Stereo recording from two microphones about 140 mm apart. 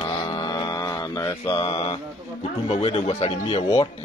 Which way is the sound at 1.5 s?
45° left (ahead or behind).